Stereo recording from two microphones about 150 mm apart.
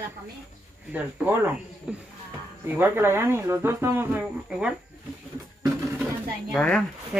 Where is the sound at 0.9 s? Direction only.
10° right (ahead or behind).